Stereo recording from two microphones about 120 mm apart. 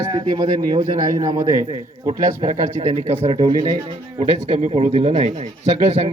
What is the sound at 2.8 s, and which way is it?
Speech, 55° right (ahead or behind).